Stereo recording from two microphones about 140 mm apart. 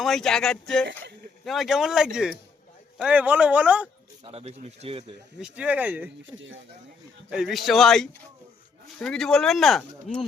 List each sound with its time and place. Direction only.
0.0 s speech: centre (ahead or behind)
4.2 s speech: 45° right (ahead or behind)
5.4 s speech: 5° right (ahead or behind)
7.3 s speech: 5° right (ahead or behind)